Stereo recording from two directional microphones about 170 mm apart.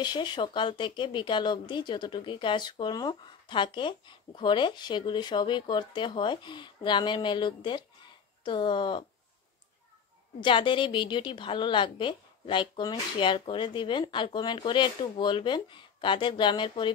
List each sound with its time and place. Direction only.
0.0 s speech: 25° left (ahead or behind)
10.4 s speech: 30° left (ahead or behind)